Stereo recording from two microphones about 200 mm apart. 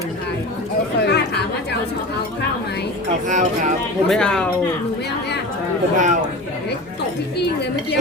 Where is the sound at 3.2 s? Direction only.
40° right (ahead or behind).